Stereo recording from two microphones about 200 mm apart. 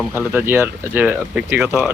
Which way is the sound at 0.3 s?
10° right (ahead or behind).